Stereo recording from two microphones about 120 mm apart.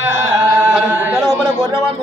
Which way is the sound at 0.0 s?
20° right (ahead or behind).